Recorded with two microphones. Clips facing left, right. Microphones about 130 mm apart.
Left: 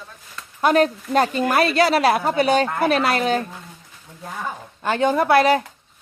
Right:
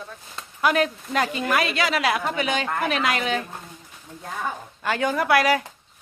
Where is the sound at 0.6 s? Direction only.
35° left (ahead or behind).